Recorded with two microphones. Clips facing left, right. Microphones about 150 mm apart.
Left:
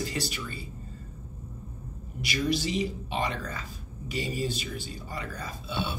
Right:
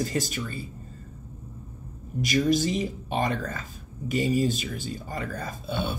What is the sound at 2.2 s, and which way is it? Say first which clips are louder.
Speech: right 5 dB; 45° right (ahead or behind).